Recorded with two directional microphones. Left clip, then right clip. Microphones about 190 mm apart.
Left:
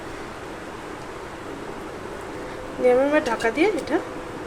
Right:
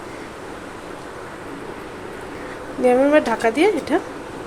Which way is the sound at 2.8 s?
40° right (ahead or behind).